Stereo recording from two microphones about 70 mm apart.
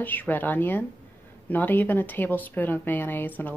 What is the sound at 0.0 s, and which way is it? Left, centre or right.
A woman's voice, left.